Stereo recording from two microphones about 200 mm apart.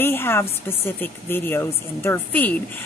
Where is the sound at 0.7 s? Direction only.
10° left (ahead or behind).